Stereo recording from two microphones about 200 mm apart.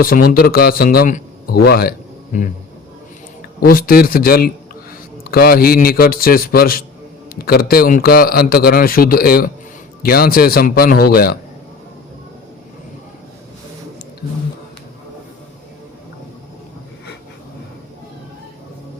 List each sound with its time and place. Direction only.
0.0 s speech: 45° left (ahead or behind)
3.6 s a man's voice: 45° left (ahead or behind)